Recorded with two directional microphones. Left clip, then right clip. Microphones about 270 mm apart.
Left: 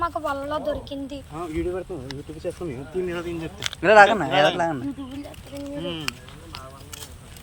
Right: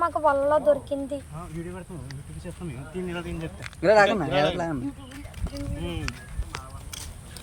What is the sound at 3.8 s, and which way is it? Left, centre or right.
Speech, centre.